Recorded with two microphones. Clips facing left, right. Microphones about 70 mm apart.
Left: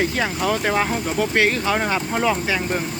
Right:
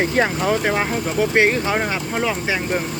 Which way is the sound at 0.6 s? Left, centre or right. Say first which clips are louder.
Even; centre.